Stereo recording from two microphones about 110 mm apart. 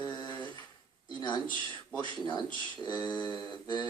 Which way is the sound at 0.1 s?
40° left (ahead or behind).